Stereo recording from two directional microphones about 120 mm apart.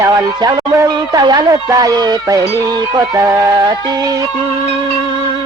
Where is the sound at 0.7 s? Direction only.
30° right (ahead or behind).